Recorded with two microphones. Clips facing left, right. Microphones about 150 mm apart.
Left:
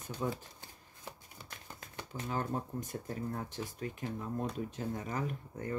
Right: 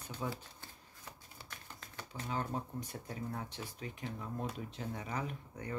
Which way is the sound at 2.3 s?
45° left (ahead or behind).